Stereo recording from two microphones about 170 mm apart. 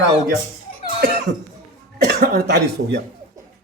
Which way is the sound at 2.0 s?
70° right (ahead or behind).